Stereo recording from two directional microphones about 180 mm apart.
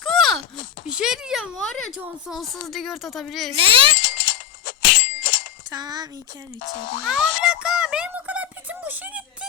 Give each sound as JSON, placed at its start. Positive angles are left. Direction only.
{"t": 0.0, "sound": "a sound", "side_deg": 0}
{"t": 2.0, "sound": "speech", "side_deg": -5}
{"t": 3.5, "sound": "a child's voice", "side_deg": -30}
{"t": 4.0, "sound": "bicycle bell", "side_deg": 50}
{"t": 5.7, "sound": "speech", "side_deg": -20}
{"t": 6.6, "sound": "speech", "side_deg": 50}
{"t": 7.4, "sound": "a sound", "side_deg": -5}